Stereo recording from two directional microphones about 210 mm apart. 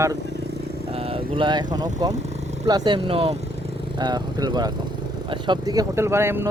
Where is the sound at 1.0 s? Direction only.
25° right (ahead or behind).